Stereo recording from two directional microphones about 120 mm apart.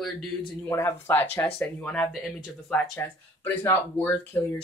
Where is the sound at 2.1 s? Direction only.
5° right (ahead or behind).